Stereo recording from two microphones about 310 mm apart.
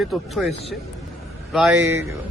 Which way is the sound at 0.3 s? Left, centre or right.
Centre.